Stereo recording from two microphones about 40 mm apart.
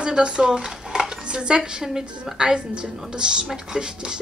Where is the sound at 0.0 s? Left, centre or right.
Right.